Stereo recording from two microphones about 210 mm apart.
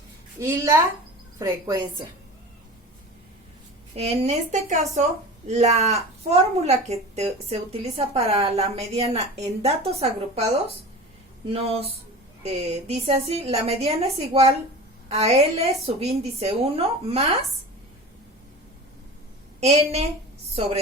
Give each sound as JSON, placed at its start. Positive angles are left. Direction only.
{"t": 0.3, "sound": "a woman's voice", "side_deg": -15}
{"t": 3.9, "sound": "a woman's voice", "side_deg": -30}
{"t": 11.4, "sound": "a woman's voice", "side_deg": -30}
{"t": 19.5, "sound": "a woman's voice", "side_deg": -30}